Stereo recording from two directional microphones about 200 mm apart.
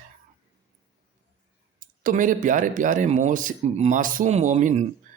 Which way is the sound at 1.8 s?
45° right (ahead or behind).